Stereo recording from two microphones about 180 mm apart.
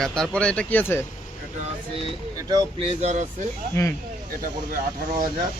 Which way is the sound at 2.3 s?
20° right (ahead or behind).